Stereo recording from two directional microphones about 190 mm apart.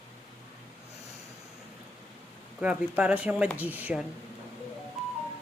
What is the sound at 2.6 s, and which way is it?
Speech, 5° right (ahead or behind).